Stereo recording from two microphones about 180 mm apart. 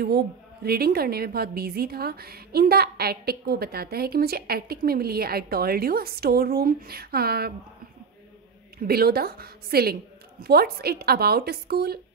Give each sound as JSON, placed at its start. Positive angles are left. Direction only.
{"t": 0.0, "sound": "a woman's voice", "side_deg": -60}
{"t": 8.7, "sound": "a woman's voice", "side_deg": -60}